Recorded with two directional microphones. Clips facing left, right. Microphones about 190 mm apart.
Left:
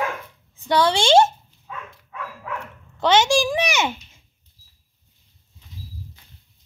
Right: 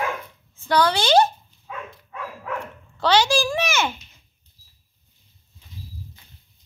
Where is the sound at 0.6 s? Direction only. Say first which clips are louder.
Left 1 dB; 25° left (ahead or behind).